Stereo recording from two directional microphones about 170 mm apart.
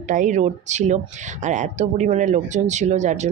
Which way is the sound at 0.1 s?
50° right (ahead or behind).